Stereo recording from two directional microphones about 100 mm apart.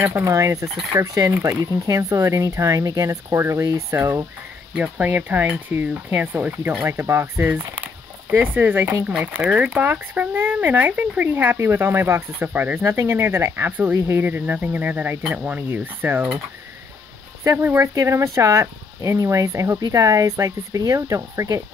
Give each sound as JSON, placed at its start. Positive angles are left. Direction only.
{"t": 0.2, "sound": "speech", "side_deg": -30}
{"t": 4.7, "sound": "speech", "side_deg": -15}
{"t": 7.7, "sound": "a sound", "side_deg": -15}
{"t": 9.0, "sound": "speech", "side_deg": -15}
{"t": 17.4, "sound": "speech", "side_deg": -25}